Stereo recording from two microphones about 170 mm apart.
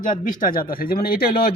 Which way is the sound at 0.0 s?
50° left (ahead or behind).